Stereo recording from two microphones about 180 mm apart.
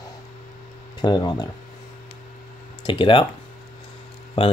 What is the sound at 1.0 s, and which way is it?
Speech, 25° left (ahead or behind).